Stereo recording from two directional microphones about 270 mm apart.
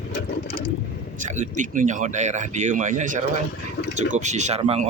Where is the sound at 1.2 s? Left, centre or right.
Right.